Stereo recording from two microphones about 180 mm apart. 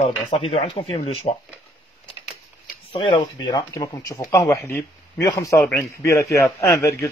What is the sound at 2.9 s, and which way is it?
Speech, 30° left (ahead or behind).